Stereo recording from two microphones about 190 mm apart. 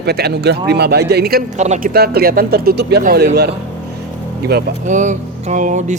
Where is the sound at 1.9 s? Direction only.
55° right (ahead or behind).